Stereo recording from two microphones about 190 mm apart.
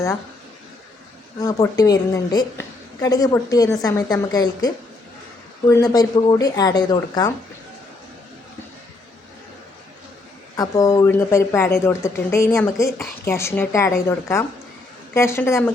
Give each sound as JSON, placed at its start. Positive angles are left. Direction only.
{"t": 1.4, "sound": "a woman's voice", "side_deg": 15}
{"t": 10.6, "sound": "speech", "side_deg": 15}